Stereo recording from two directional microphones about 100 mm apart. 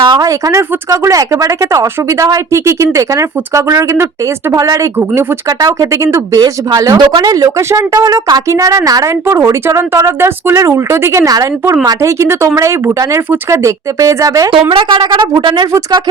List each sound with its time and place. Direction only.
0.0 s a sound: 50° right (ahead or behind)
0.3 s speech: 35° right (ahead or behind)
6.4 s speech: 45° right (ahead or behind)
14.7 s speech: 55° right (ahead or behind)